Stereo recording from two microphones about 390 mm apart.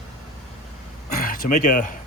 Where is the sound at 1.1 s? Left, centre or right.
Left.